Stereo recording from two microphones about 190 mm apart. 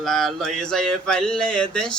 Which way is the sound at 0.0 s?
Centre (ahead or behind).